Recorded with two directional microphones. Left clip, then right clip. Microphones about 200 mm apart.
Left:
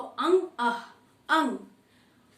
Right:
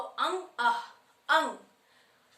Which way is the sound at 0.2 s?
10° right (ahead or behind).